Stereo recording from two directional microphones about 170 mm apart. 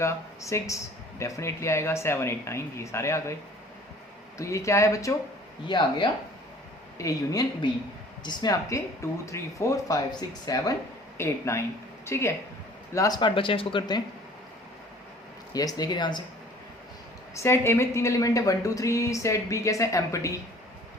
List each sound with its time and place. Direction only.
0.0 s a woman's voice: 15° left (ahead or behind)
4.4 s a woman's voice: 15° left (ahead or behind)
15.5 s speech: 20° left (ahead or behind)
17.3 s a woman's voice: 15° left (ahead or behind)